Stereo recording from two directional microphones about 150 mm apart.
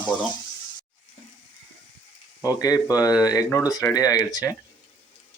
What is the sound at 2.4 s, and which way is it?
Speech, 25° left (ahead or behind).